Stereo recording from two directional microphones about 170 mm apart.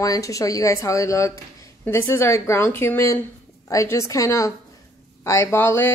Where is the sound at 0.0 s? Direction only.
20° left (ahead or behind).